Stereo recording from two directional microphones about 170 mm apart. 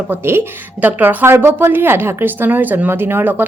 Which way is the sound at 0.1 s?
15° right (ahead or behind).